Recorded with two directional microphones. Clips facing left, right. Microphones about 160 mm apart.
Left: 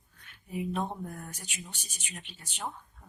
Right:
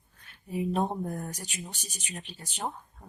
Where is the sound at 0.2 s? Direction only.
35° right (ahead or behind).